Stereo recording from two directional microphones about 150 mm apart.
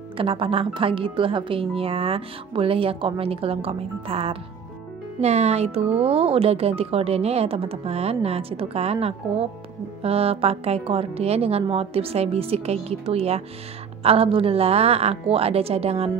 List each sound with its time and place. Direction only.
0.2 s speech: 35° right (ahead or behind)